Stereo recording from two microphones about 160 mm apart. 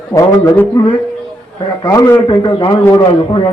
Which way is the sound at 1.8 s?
20° left (ahead or behind).